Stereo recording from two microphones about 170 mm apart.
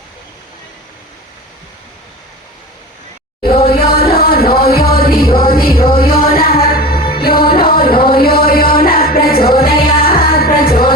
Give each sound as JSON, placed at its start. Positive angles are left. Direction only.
{"t": 3.7, "sound": "music", "side_deg": 65}